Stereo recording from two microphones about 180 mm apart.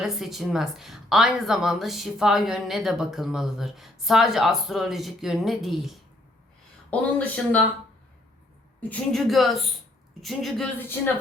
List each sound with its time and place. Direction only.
0.0 s a woman's voice: centre (ahead or behind)
8.8 s a woman's voice: 5° left (ahead or behind)
10.8 s speech: 10° left (ahead or behind)